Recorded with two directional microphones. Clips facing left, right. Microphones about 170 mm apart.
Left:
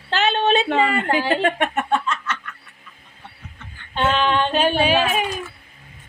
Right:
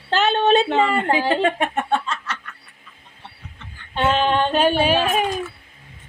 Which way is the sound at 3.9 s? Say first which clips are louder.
Right 1 dB; 45° right (ahead or behind).